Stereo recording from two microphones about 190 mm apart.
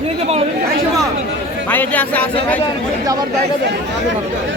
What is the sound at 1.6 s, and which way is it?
Speech, 10° left (ahead or behind).